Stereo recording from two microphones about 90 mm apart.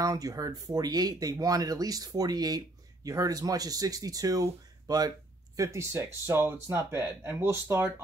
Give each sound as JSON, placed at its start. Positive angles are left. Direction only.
{"t": 0.0, "sound": "speech", "side_deg": -45}
{"t": 5.6, "sound": "speech", "side_deg": -35}